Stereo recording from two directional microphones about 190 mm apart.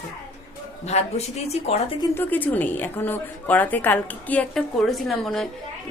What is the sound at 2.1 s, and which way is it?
A woman's voice, 10° left (ahead or behind).